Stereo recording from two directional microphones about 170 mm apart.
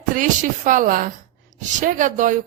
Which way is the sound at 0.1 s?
50° right (ahead or behind).